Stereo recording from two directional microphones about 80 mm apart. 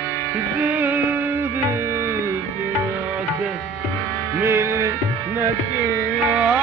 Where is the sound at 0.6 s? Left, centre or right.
Centre.